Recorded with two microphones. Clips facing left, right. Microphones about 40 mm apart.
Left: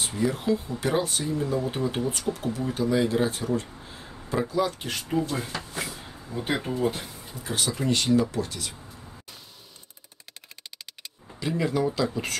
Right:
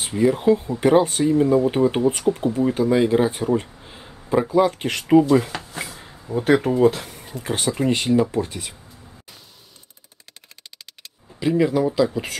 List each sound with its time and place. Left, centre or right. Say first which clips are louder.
0.0 s speech: right 8 dB; right
5.0 s speech: right 14 dB; right
5.7 s a sound: right 1 dB; right
6.3 s speech: right 11 dB; right
7.5 s speech: right 5 dB; right
11.3 s speech: right 7 dB; centre